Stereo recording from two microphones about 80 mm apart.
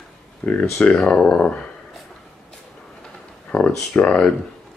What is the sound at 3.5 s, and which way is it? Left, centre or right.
Speech, centre.